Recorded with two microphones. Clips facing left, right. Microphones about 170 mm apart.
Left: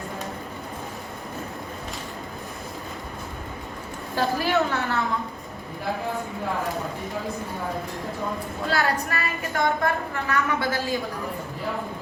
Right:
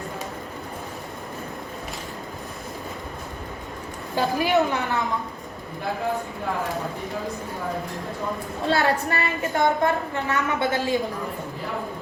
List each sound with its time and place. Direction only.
4.1 s a woman's voice: 15° right (ahead or behind)
8.6 s a woman's voice: 25° right (ahead or behind)